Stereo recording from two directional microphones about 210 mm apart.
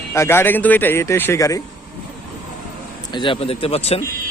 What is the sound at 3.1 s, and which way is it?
Speech, 25° left (ahead or behind).